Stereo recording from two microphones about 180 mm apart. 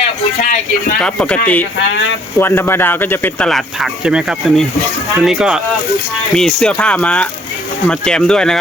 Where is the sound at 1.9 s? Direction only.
90° left.